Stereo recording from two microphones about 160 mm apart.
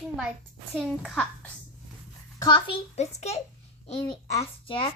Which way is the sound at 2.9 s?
45° left (ahead or behind).